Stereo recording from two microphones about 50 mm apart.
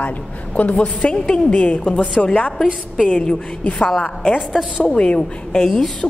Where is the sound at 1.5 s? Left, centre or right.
Left.